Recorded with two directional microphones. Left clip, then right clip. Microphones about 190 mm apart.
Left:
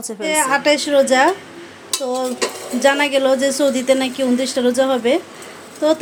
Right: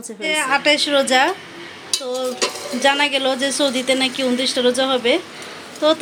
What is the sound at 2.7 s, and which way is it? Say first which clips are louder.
A woman's voice: left 2 dB; 20° left (ahead or behind).